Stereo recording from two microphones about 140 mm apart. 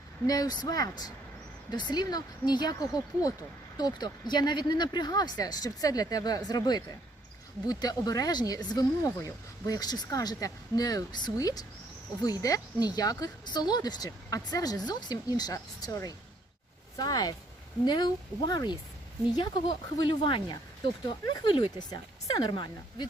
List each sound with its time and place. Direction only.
0.3 s speech: 30° left (ahead or behind)